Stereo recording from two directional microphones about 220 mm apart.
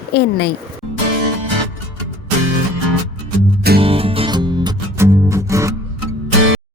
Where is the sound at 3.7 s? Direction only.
25° right (ahead or behind).